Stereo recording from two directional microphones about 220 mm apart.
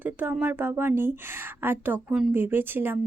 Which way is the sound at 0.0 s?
10° right (ahead or behind).